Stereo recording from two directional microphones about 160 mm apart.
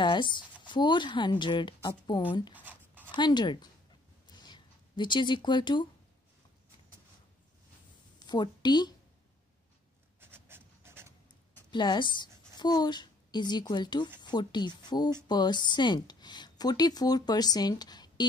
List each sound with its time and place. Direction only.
0.0 s speech: 30° left (ahead or behind)
2.5 s writing: 10° right (ahead or behind)
3.2 s speech: 30° left (ahead or behind)
4.3 s a sound: 25° left (ahead or behind)
8.2 s a woman's voice: 25° left (ahead or behind)
10.2 s writing: 15° right (ahead or behind)
11.7 s a woman's voice: 30° left (ahead or behind)